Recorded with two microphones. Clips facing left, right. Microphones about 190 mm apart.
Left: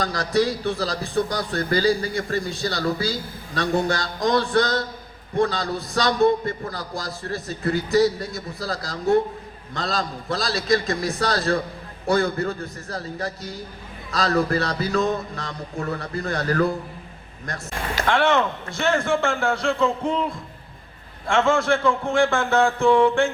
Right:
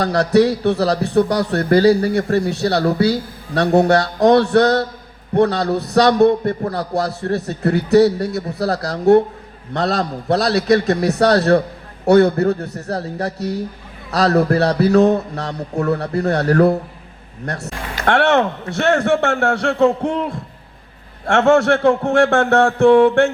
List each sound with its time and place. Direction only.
0.0 s a man's voice: 70° right (ahead or behind)
21.2 s a man's voice: 70° right (ahead or behind)